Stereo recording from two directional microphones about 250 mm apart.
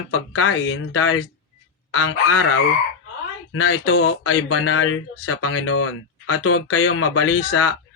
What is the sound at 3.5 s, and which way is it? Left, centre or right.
Speech, left.